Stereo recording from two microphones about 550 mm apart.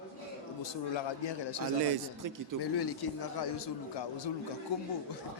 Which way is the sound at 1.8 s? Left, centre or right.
Right.